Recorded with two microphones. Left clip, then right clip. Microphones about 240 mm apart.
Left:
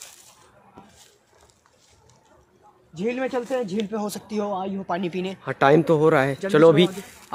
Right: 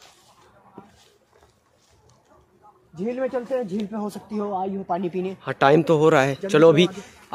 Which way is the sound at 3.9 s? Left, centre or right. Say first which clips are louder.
Left 2 dB; left.